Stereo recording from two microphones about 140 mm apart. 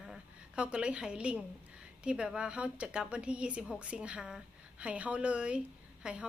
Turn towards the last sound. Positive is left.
turn(degrees=-5)  # may be behind; listen again after turning